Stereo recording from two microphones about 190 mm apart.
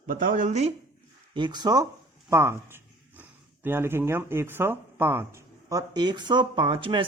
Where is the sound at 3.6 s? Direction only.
10° right (ahead or behind).